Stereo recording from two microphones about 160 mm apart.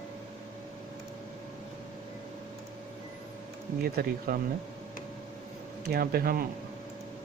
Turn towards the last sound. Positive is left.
turn(degrees=-70)  # may be behind; listen again after turning